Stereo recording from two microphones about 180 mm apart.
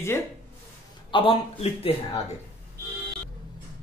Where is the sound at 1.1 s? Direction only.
30° left (ahead or behind).